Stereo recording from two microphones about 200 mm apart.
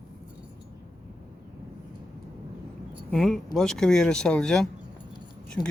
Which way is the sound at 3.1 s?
Centre (ahead or behind).